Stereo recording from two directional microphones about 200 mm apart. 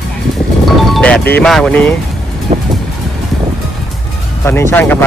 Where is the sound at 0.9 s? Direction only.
5° left (ahead or behind).